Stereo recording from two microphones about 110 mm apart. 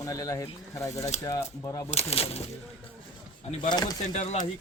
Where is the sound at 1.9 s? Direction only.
65° left (ahead or behind).